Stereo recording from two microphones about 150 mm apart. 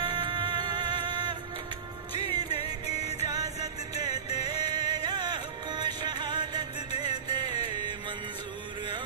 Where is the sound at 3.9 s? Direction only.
25° right (ahead or behind).